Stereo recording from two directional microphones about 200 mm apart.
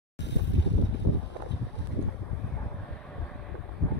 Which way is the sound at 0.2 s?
60° left (ahead or behind).